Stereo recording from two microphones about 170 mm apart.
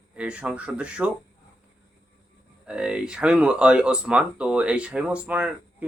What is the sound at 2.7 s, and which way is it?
Speech, 5° right (ahead or behind).